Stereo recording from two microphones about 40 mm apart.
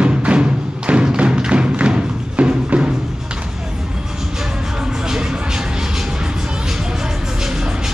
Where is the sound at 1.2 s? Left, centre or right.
Right.